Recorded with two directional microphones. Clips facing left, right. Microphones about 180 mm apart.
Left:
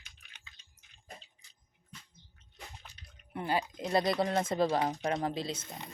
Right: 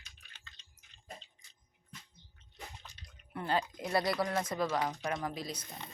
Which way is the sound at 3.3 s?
15° left (ahead or behind).